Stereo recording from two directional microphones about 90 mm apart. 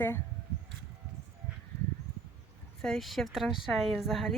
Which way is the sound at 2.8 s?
5° left (ahead or behind).